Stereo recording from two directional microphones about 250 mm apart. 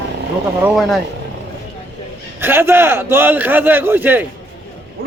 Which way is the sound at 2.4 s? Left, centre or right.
Centre.